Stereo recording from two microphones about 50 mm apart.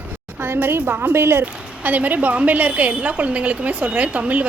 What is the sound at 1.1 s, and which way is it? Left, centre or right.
Speech, right.